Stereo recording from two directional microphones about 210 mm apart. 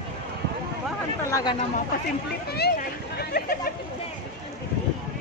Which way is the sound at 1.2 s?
15° left (ahead or behind).